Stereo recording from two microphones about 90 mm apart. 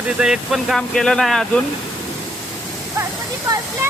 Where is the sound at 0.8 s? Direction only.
5° left (ahead or behind).